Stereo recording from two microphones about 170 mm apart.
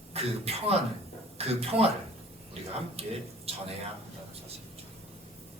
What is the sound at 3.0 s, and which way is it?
Speech, 35° right (ahead or behind).